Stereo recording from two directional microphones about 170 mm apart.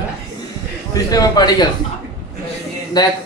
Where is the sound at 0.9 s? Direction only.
20° left (ahead or behind).